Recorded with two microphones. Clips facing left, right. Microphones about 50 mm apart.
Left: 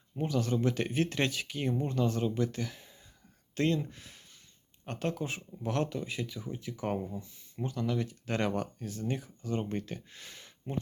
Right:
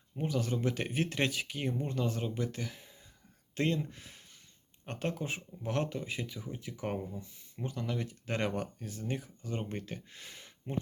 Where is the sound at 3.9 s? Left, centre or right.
Centre.